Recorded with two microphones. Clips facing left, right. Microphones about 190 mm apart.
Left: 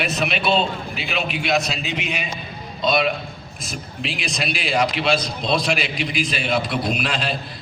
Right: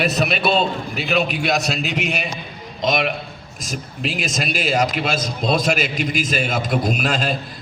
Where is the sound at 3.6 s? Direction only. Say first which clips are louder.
Right 3 dB; 40° right (ahead or behind).